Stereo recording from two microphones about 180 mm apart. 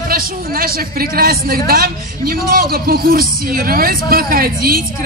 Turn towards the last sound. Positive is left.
turn(degrees=-55)  # may be behind; listen again after turning